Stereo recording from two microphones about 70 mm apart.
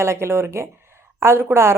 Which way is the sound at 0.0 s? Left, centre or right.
Right.